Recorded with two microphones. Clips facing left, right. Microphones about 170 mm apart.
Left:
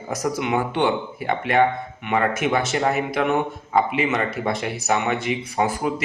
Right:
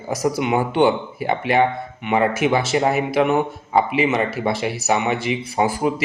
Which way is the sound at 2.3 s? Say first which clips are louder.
Right 3 dB; 10° right (ahead or behind).